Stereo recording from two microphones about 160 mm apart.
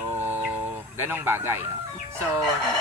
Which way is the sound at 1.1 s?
15° right (ahead or behind).